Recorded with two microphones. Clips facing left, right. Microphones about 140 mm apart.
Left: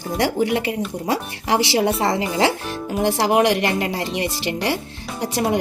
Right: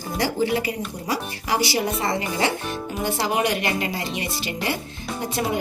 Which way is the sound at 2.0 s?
90° left.